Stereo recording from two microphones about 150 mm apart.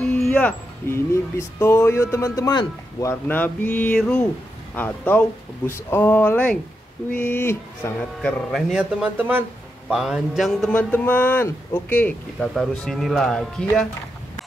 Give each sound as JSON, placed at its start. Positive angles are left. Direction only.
{"t": 0.0, "sound": "a man's voice", "side_deg": 5}